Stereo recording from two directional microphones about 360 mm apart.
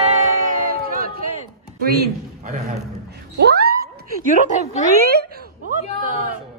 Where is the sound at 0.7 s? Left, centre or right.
Right.